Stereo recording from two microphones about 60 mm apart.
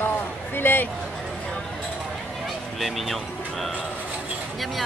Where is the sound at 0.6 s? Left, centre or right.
Left.